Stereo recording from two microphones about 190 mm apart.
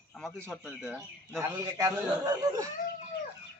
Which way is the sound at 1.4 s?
15° right (ahead or behind).